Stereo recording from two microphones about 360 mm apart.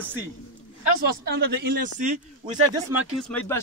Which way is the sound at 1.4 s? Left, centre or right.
Right.